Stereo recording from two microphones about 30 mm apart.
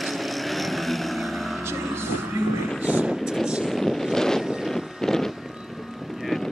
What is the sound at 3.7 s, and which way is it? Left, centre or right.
Wind noise, centre.